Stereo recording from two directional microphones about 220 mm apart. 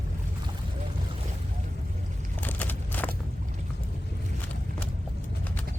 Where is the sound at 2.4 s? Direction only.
10° left (ahead or behind).